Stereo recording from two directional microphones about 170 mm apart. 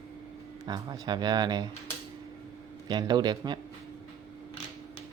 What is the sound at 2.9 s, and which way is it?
Speech, 25° right (ahead or behind).